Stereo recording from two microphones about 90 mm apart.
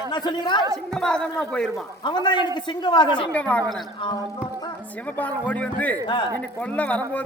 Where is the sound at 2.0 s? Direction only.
60° left (ahead or behind).